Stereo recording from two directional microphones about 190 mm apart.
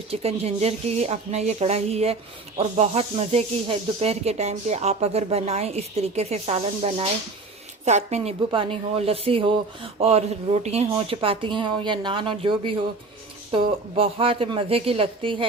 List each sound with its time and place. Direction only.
0.1 s a woman's voice: 35° right (ahead or behind)